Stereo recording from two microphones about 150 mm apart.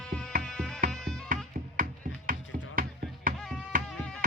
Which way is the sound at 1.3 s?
65° right (ahead or behind).